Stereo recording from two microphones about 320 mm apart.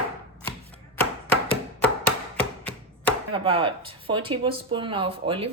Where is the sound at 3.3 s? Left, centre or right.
Centre.